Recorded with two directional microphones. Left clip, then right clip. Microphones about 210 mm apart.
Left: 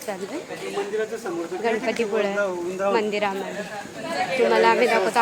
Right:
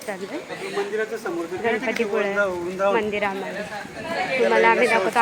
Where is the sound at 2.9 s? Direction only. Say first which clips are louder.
Even; centre (ahead or behind).